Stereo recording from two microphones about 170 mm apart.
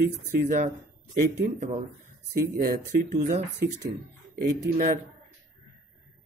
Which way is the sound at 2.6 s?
55° right (ahead or behind).